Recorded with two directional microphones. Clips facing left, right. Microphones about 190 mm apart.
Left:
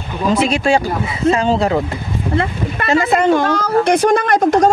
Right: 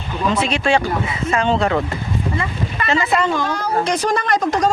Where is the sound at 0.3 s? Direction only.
35° left (ahead or behind).